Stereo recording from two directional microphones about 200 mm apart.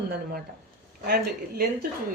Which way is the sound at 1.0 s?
50° right (ahead or behind).